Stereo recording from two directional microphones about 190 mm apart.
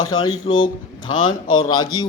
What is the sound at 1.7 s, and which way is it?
Speech, 20° left (ahead or behind).